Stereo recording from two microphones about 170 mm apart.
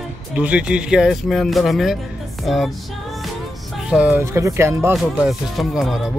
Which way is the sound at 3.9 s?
10° right (ahead or behind).